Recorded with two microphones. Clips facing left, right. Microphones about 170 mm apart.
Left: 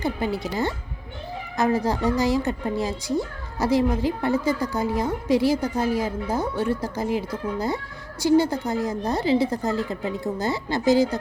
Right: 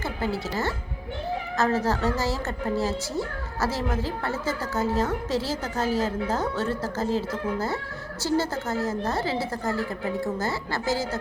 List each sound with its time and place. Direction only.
0.0 s a woman's voice: 15° left (ahead or behind)